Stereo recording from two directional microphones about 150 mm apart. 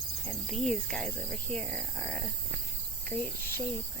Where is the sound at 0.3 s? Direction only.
Centre (ahead or behind).